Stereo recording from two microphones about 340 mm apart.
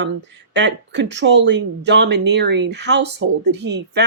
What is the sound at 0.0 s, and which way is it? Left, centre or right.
Speech, right.